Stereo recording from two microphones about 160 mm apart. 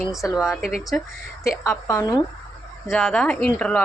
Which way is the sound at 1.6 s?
15° left (ahead or behind).